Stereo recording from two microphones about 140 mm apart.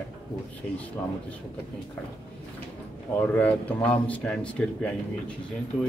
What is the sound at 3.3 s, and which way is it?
A man's voice, 10° left (ahead or behind).